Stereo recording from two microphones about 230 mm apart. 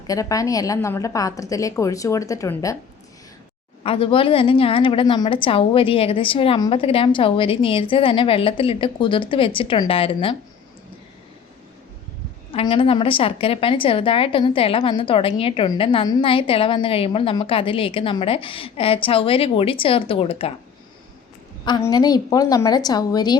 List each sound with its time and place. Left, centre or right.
0.1 s a woman's voice: centre
3.8 s a woman's voice: left
12.5 s a woman's voice: left
21.6 s a woman's voice: centre